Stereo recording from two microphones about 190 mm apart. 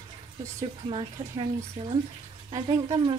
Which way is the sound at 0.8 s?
30° right (ahead or behind).